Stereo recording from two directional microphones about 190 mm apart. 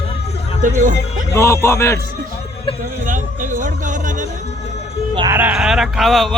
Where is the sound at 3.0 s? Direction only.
45° right (ahead or behind).